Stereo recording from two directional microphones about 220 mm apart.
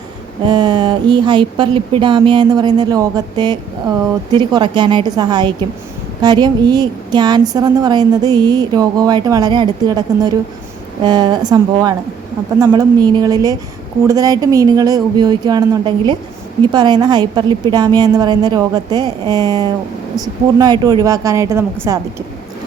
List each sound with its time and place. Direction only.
0.4 s a woman's voice: 20° right (ahead or behind)